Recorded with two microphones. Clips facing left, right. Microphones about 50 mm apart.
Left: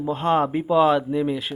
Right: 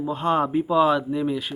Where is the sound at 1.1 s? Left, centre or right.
Centre.